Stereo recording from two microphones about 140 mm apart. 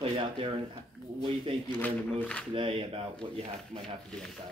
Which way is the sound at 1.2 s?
35° right (ahead or behind).